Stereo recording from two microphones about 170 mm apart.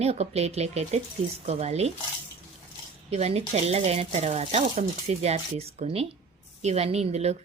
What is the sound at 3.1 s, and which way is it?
A woman's voice, 40° right (ahead or behind).